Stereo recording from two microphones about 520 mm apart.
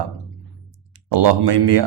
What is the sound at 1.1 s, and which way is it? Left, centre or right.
Speech, right.